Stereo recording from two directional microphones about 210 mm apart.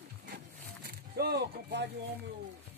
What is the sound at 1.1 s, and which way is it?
Speech, 50° right (ahead or behind).